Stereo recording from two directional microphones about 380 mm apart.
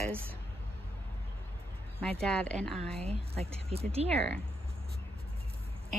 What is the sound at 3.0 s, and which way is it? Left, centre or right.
Speech, centre.